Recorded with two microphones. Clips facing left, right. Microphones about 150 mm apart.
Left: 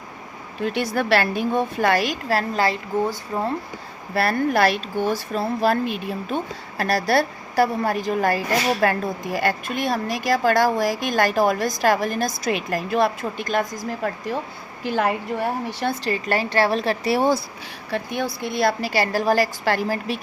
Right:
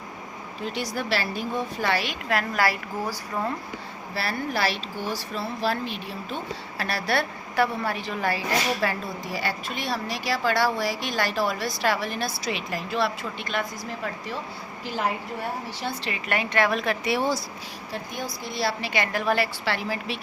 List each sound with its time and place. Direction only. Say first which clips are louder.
0.6 s speech: left 7 dB; 60° left (ahead or behind); by 3.5 s 25° left (ahead or behind)
4.1 s speech: left 9 dB; 50° left (ahead or behind)
14.8 s a woman's voice: left 6 dB; 60° left (ahead or behind)
16.0 s a woman's voice: left 6 dB; 35° left (ahead or behind)
17.9 s a woman's voice: left 8 dB; 65° left (ahead or behind)
18.4 s a woman's voice: left 6 dB; 55° left (ahead or behind)